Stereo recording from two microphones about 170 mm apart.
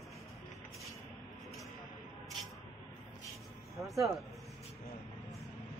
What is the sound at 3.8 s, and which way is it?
Speech, centre (ahead or behind).